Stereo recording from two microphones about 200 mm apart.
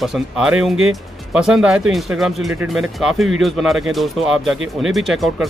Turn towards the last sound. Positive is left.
turn(degrees=0)  # may be behind; listen again after turning